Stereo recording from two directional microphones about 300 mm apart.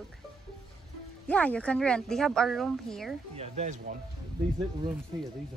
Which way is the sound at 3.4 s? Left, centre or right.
Right.